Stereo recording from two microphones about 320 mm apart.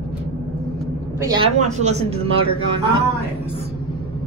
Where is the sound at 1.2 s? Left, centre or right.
Centre.